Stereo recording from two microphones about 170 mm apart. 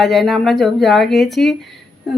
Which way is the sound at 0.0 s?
Centre (ahead or behind).